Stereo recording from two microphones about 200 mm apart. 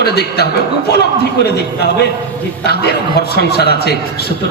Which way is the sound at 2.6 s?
55° left (ahead or behind).